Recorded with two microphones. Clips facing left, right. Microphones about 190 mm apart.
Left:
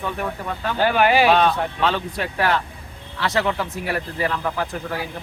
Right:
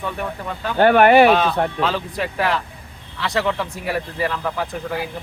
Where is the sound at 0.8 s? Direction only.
55° right (ahead or behind).